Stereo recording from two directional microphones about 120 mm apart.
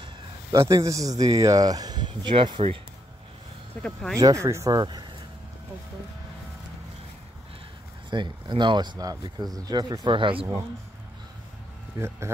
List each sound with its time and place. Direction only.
0.0 s a man's voice: 30° right (ahead or behind)
3.8 s speech: 5° left (ahead or behind)
4.2 s speech: 25° right (ahead or behind)
8.1 s speech: 40° right (ahead or behind)